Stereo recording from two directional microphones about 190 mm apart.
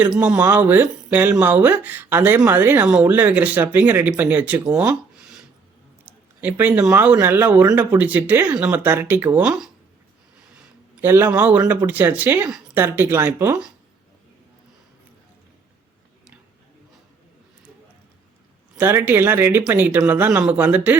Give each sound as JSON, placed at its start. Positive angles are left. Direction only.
{"t": 0.0, "sound": "speech", "side_deg": -5}
{"t": 11.0, "sound": "speech", "side_deg": -10}
{"t": 18.8, "sound": "speech", "side_deg": -10}